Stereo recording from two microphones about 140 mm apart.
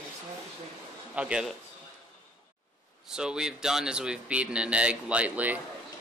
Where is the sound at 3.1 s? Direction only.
5° right (ahead or behind).